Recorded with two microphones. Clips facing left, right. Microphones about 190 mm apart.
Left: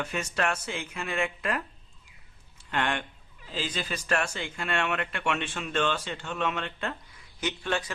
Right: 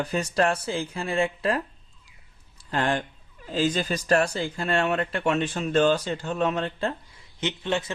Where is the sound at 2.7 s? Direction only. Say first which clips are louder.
Right 4 dB; 35° right (ahead or behind).